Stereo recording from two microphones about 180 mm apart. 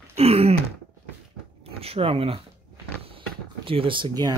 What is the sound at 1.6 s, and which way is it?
Speech, 35° right (ahead or behind).